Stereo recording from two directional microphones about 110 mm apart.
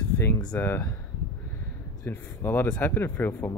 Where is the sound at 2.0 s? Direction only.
20° left (ahead or behind).